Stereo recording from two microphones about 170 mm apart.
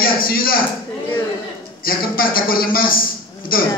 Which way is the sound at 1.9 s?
60° left (ahead or behind).